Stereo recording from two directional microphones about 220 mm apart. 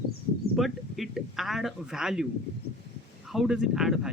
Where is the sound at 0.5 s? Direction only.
Centre (ahead or behind).